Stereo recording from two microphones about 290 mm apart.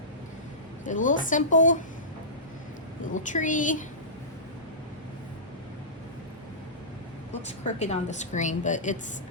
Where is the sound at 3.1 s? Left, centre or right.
Left.